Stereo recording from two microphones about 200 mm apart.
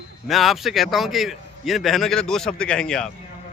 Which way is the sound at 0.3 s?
Centre (ahead or behind).